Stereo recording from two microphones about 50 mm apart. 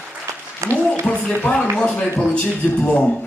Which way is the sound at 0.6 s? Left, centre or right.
Right.